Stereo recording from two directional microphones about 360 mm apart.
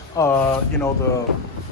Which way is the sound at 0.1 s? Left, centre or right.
Centre.